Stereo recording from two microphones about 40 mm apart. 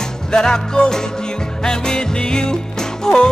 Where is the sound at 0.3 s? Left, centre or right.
Centre.